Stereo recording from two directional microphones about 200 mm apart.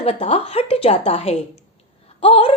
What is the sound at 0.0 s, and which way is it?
Speech, 30° left (ahead or behind).